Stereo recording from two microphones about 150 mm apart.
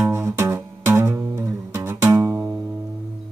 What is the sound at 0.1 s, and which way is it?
Music, 15° right (ahead or behind).